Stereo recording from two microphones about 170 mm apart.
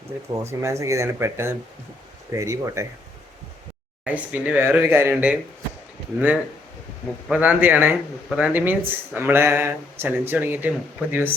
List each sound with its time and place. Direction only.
0.3 s speech: 25° right (ahead or behind)
4.0 s speech: 10° right (ahead or behind)